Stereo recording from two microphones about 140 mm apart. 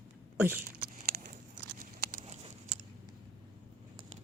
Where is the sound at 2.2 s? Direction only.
55° right (ahead or behind).